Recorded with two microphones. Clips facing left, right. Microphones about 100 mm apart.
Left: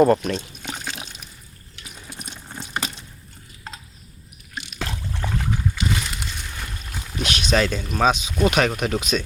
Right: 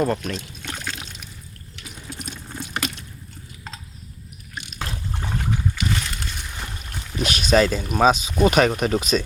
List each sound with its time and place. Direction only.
0.0 s speech: 5° left (ahead or behind)
0.6 s pour: 15° left (ahead or behind)
1.7 s water: 15° left (ahead or behind)
5.8 s a sound: 20° left (ahead or behind)
6.9 s speech: centre (ahead or behind)